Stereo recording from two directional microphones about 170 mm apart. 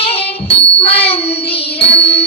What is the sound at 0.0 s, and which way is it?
Music, 35° left (ahead or behind).